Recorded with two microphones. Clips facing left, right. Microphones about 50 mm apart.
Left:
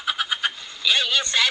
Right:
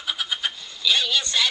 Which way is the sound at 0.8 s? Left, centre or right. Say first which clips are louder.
Left 1 dB; left.